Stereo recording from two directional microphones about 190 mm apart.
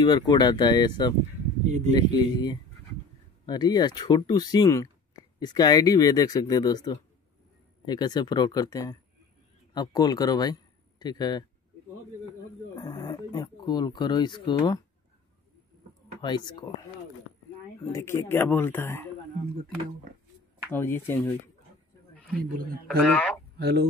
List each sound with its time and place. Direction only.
0.0 s speech: 20° left (ahead or behind)
1.7 s speech: 40° right (ahead or behind)
2.0 s a man's voice: 20° left (ahead or behind)
12.7 s speech: 20° left (ahead or behind)
16.2 s speech: 25° left (ahead or behind)
17.9 s speech: 15° left (ahead or behind)
20.7 s speech: 10° left (ahead or behind)
22.8 s speech: 5° left (ahead or behind)
23.6 s speech: 60° right (ahead or behind)